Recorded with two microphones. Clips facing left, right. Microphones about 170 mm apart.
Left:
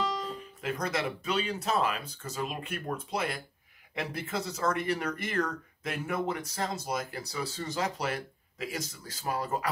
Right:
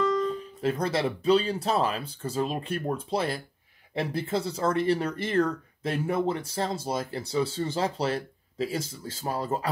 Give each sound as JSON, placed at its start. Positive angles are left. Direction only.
{"t": 0.6, "sound": "speech", "side_deg": -30}